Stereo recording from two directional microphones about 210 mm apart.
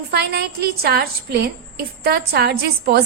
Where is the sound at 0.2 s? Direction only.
50° right (ahead or behind).